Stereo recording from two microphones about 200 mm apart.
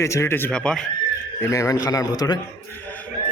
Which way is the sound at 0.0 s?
15° left (ahead or behind).